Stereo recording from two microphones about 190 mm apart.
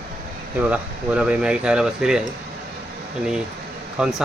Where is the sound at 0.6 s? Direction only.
5° right (ahead or behind).